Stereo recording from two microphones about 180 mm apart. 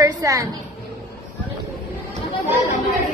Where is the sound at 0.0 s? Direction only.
20° right (ahead or behind).